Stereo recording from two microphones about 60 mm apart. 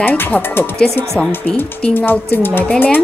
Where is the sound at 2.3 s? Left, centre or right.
Left.